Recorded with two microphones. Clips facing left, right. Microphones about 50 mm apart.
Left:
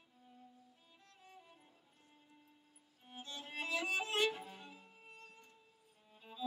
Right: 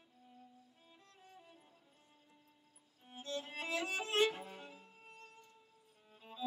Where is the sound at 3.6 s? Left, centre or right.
Right.